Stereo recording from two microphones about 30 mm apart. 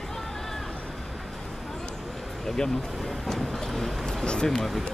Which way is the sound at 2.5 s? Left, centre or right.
Centre.